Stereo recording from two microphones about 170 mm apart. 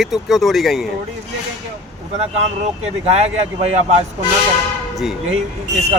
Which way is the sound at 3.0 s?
40° right (ahead or behind).